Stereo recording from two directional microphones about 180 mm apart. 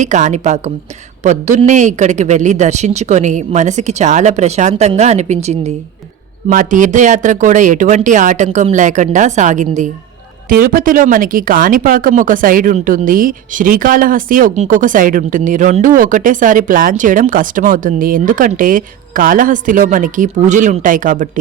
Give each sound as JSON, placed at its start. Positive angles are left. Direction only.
{"t": 0.0, "sound": "a man's voice", "side_deg": -40}